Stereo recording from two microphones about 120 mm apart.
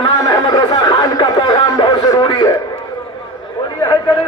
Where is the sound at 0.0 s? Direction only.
35° left (ahead or behind).